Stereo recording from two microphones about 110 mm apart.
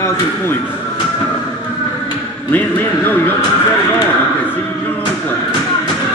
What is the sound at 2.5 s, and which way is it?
Speech, 15° left (ahead or behind).